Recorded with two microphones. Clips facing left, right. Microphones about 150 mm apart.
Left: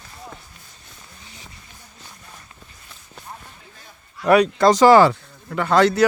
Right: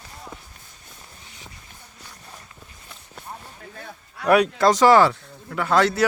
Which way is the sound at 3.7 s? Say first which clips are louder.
Right 6 dB; 60° right (ahead or behind).